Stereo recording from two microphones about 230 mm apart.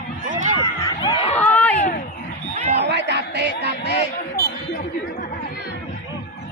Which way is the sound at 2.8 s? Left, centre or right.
Right.